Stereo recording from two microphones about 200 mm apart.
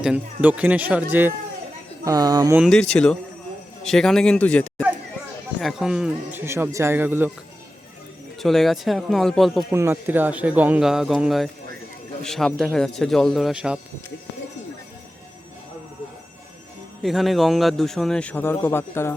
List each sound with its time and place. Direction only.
0.0 s speech: 5° right (ahead or behind)
2.0 s speech: 20° right (ahead or behind)
2.6 s a man's voice: centre (ahead or behind)
8.4 s a man's voice: centre (ahead or behind)
9.7 s a man's voice: 10° right (ahead or behind)
17.0 s a man's voice: centre (ahead or behind)